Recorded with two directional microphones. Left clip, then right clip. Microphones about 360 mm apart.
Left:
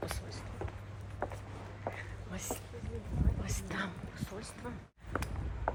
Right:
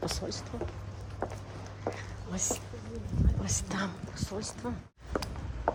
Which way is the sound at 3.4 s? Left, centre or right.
Centre.